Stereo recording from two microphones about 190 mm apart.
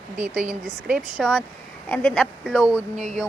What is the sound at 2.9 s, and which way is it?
Speech, 40° right (ahead or behind).